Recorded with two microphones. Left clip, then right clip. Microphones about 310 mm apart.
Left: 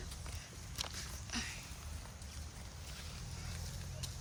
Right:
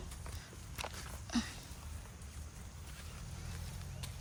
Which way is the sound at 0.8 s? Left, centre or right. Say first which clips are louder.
Left 1 dB; centre.